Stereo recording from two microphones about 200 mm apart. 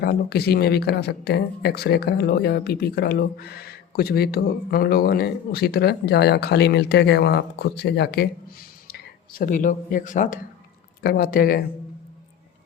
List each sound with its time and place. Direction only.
0.0 s speech: 50° left (ahead or behind)